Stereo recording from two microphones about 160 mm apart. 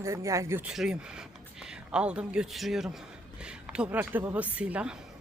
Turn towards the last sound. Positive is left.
turn(degrees=-5)  # may be behind; listen again after turning